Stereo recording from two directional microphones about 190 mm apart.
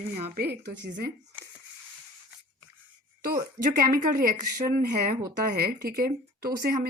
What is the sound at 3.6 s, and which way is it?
Speech, 35° right (ahead or behind).